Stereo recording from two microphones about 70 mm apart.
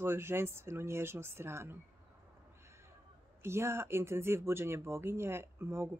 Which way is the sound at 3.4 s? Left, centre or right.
Right.